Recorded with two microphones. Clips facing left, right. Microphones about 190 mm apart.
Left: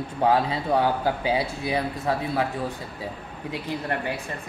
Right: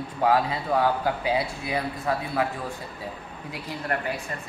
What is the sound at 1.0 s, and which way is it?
Speech, 30° left (ahead or behind).